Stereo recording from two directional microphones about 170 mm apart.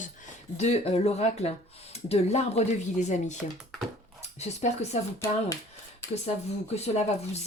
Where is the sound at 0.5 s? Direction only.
40° left (ahead or behind).